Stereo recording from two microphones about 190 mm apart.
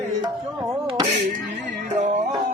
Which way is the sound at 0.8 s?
25° right (ahead or behind).